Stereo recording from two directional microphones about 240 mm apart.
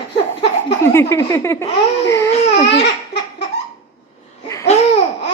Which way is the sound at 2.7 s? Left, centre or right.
Left.